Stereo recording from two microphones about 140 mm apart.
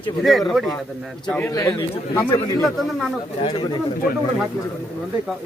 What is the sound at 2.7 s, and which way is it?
Speech, centre (ahead or behind).